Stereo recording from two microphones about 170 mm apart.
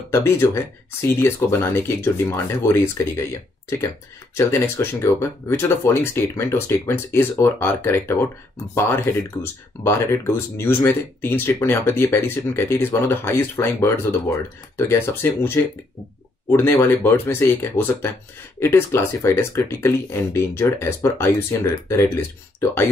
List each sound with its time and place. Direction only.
0.1 s speech: 15° left (ahead or behind)
4.4 s speech: 15° left (ahead or behind)